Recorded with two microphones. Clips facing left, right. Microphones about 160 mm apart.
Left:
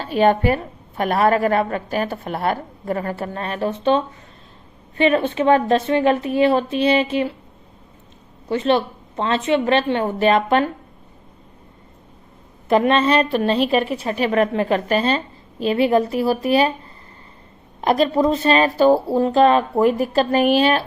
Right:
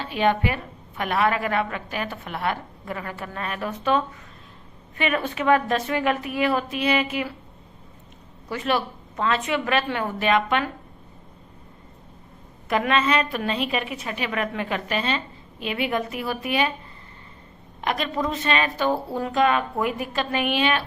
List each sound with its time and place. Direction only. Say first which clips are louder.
0.0 s a woman's voice: left 6 dB; 40° left (ahead or behind)
8.4 s a woman's voice: left 7 dB; 25° left (ahead or behind)
12.6 s a woman's voice: left 6 dB; 30° left (ahead or behind)
17.7 s a woman's voice: left 9 dB; 35° left (ahead or behind)